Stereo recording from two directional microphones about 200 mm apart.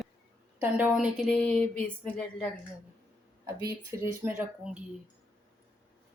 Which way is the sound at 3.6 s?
10° right (ahead or behind).